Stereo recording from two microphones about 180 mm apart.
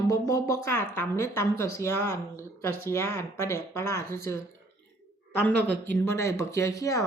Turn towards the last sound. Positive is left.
turn(degrees=20)  # may be behind; listen again after turning